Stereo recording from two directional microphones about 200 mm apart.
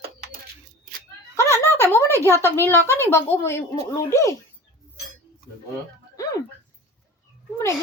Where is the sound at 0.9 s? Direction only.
45° right (ahead or behind).